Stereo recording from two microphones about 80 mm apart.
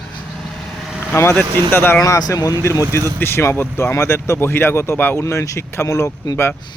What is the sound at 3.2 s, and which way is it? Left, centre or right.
Speech, left.